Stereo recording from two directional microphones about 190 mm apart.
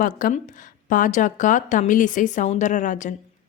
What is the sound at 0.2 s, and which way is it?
A woman's voice, 40° left (ahead or behind).